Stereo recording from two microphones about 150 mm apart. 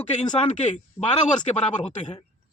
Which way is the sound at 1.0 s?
10° left (ahead or behind).